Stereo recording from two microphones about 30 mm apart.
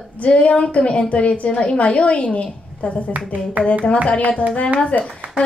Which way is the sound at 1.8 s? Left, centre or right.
Left.